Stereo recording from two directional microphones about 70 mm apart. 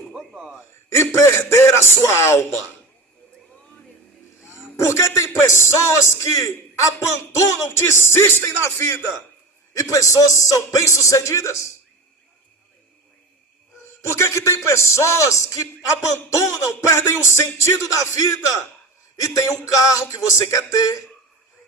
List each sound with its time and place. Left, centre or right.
0.1 s a sound: centre
0.9 s a man's voice: left
4.9 s speech: left
7.7 s a man's voice: left
9.7 s speech: left
14.0 s speech: left